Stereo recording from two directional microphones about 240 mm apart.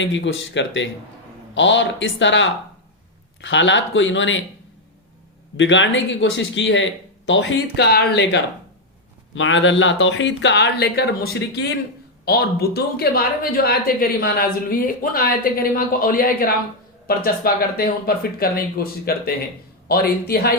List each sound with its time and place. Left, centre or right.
0.0 s speech: left
5.5 s speech: left